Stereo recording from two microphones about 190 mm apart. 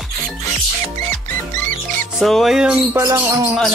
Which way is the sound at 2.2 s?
Centre (ahead or behind).